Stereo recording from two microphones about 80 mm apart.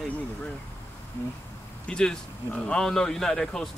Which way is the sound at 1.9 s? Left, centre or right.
Centre.